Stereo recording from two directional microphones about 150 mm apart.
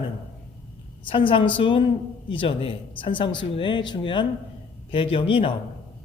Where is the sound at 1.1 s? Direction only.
35° left (ahead or behind).